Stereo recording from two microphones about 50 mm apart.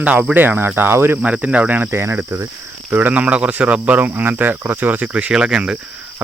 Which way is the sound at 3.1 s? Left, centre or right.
Right.